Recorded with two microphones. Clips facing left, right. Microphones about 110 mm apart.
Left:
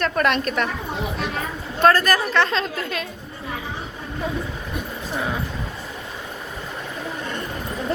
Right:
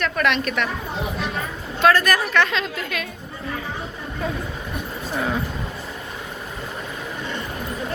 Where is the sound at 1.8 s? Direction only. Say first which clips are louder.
Left 1 dB; 40° left (ahead or behind).